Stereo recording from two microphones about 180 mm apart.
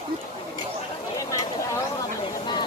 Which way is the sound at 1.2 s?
20° left (ahead or behind).